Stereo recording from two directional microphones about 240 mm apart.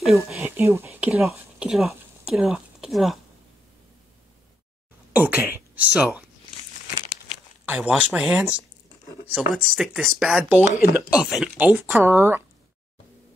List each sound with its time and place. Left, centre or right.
0.0 s speech: centre
5.1 s speech: centre
7.6 s speech: centre